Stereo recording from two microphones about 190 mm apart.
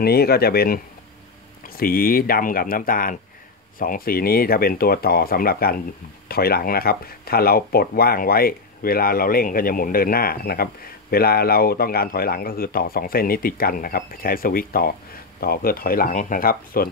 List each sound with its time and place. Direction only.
0.0 s speech: 55° left (ahead or behind)
1.8 s speech: 50° left (ahead or behind)